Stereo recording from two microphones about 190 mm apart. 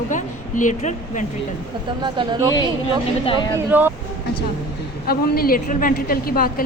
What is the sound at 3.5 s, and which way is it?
Speech, 10° right (ahead or behind).